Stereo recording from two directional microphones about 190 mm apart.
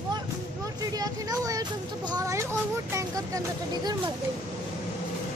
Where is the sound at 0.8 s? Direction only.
20° right (ahead or behind).